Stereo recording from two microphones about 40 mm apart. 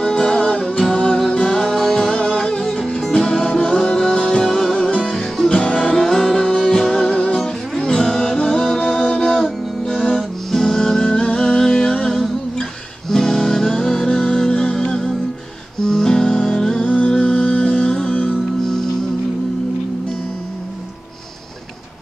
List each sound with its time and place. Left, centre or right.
0.0 s music: left
1.6 s music: centre
2.1 s music: left
4.5 s music: centre; by 5.8 s left
5.9 s music: centre
7.0 s music: left
16.8 s music: left
17.1 s music: left